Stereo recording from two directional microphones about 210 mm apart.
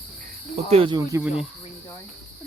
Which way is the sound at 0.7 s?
25° right (ahead or behind).